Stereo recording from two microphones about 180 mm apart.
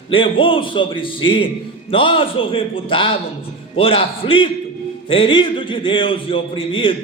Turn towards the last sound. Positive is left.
turn(degrees=30)  # may be behind; listen again after turning